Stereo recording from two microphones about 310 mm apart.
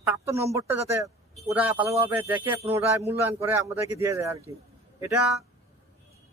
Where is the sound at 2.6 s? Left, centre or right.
Centre.